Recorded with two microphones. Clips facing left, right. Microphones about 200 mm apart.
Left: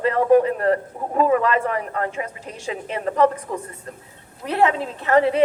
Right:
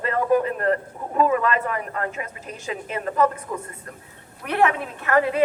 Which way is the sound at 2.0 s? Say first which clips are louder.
Left 3 dB; 30° left (ahead or behind).